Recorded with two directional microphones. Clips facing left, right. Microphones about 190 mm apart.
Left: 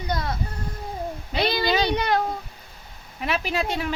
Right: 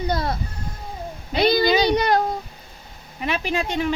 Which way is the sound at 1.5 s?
40° right (ahead or behind).